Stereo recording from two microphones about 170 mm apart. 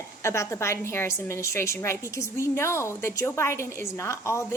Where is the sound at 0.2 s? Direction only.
15° left (ahead or behind).